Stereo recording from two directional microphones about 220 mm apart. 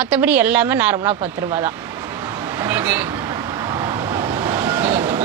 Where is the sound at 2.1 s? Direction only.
10° right (ahead or behind).